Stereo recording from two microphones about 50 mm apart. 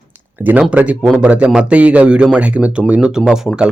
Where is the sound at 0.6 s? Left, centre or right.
Right.